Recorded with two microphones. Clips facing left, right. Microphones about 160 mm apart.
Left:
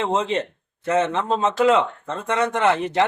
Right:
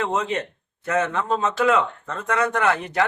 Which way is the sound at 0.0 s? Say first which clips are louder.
Left 2 dB; 25° left (ahead or behind).